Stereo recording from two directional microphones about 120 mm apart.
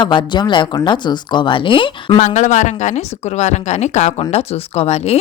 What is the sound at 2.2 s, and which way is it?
Speech, 90° left.